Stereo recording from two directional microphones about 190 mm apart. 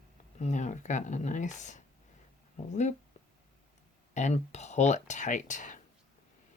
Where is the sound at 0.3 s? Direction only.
40° left (ahead or behind).